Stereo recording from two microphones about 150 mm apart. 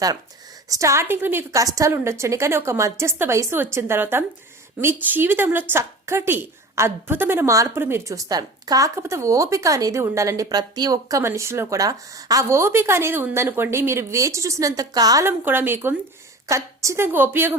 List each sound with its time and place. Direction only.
0.7 s a woman's voice: 20° right (ahead or behind)